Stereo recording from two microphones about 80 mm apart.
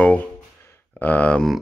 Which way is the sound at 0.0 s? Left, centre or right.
Centre.